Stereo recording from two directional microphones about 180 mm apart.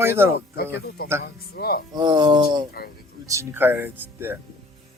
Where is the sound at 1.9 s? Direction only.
25° right (ahead or behind).